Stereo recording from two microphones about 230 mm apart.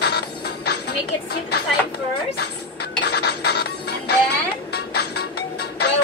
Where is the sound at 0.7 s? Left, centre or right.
Left.